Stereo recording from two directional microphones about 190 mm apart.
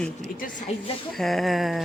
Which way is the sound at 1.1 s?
Centre (ahead or behind).